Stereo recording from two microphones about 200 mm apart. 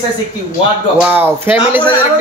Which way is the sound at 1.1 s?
10° right (ahead or behind).